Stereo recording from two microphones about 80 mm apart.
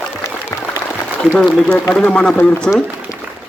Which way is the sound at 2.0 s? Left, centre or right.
Centre.